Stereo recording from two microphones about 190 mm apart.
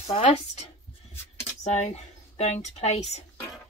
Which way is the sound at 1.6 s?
35° left (ahead or behind).